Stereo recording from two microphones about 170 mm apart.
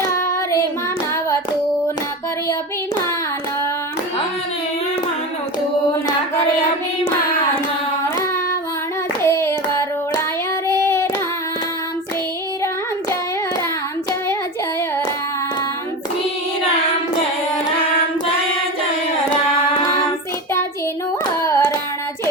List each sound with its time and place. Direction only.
9.2 s hands: 15° left (ahead or behind)
10.7 s child singing: 15° left (ahead or behind)
21.4 s carnatic music: 15° left (ahead or behind)